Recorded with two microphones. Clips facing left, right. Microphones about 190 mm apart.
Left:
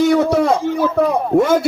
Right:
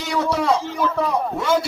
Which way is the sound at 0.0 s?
50° left (ahead or behind).